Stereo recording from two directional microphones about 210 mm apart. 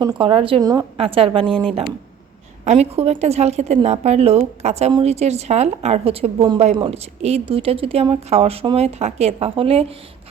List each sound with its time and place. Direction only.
0.0 s speech: 20° right (ahead or behind)
1.5 s speech: 5° left (ahead or behind)
2.6 s a woman's voice: 30° right (ahead or behind)